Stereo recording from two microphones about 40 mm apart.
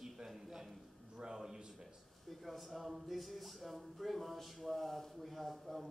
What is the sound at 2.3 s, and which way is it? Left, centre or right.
Speech, centre.